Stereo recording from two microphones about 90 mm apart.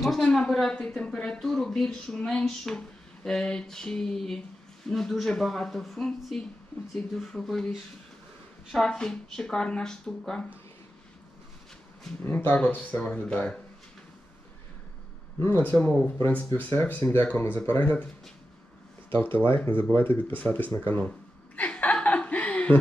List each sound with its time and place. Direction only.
0.2 s a woman's voice: 5° left (ahead or behind)
12.2 s speech: 25° left (ahead or behind)
12.5 s a woman's voice: 10° left (ahead or behind)
15.4 s speech: 20° left (ahead or behind)
19.0 s speech: 25° left (ahead or behind)
21.5 s chuckle: 15° left (ahead or behind)